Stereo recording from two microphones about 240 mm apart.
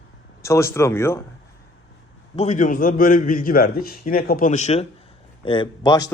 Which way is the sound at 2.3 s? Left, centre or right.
Left.